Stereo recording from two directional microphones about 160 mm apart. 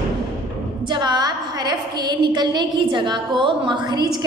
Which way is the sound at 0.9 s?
25° right (ahead or behind).